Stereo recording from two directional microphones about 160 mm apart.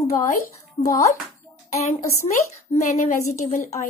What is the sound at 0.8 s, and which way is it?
Speech, 30° left (ahead or behind).